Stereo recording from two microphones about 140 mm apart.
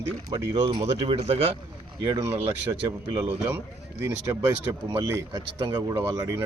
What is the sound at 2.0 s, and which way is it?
Speech, 25° right (ahead or behind).